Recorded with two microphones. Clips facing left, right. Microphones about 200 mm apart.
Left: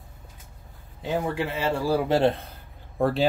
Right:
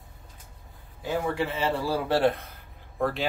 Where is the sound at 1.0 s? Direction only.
15° left (ahead or behind).